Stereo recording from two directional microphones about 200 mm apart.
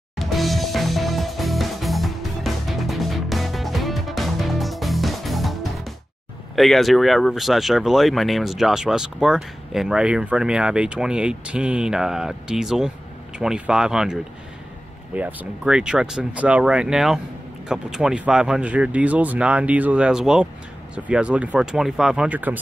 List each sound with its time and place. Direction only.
0.2 s music: centre (ahead or behind)
6.5 s speech: centre (ahead or behind)